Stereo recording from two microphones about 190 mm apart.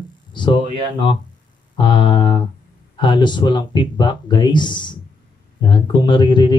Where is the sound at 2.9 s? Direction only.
25° left (ahead or behind).